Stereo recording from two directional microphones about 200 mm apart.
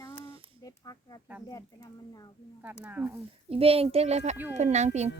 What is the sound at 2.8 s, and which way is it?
Speech, 10° right (ahead or behind).